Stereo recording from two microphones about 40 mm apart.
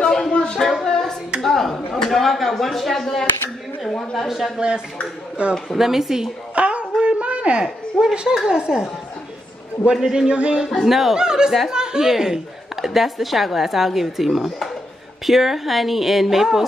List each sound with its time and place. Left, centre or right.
0.0 s a sound: centre
0.3 s a sound: left
0.8 s hands: centre
1.4 s a sound: centre
2.0 s a woman's voice: centre
4.6 s speech: right
5.8 s a woman's voice: centre
6.5 s a sound: right
7.6 s speech: centre
9.9 s a woman's voice: centre
10.2 s speech: right
10.9 s speech: centre
11.1 s a woman's voice: centre